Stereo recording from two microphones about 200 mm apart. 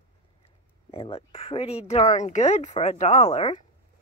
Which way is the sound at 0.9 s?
30° left (ahead or behind).